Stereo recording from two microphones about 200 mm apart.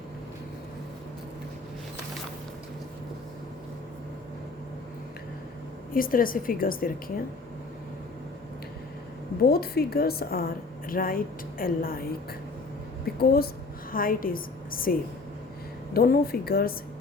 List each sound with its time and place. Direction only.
5.9 s a woman's voice: 45° left (ahead or behind)
9.4 s a woman's voice: 50° left (ahead or behind)
13.1 s a woman's voice: 50° left (ahead or behind)